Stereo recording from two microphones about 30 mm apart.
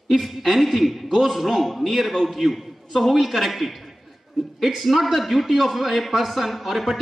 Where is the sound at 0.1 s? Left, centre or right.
Centre.